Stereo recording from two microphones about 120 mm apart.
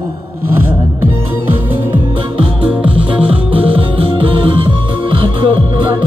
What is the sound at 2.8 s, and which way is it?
Music, 10° right (ahead or behind).